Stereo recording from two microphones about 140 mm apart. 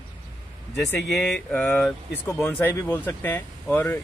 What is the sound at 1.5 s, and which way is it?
Speech, 10° left (ahead or behind).